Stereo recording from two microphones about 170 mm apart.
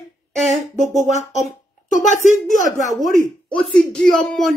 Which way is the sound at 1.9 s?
45° left (ahead or behind).